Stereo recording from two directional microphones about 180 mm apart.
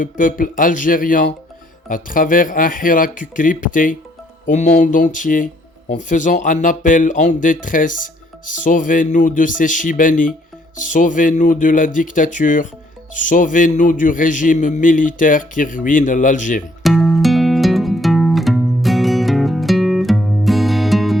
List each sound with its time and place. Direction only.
0.0 s speech: 50° left (ahead or behind)
16.8 s music: centre (ahead or behind)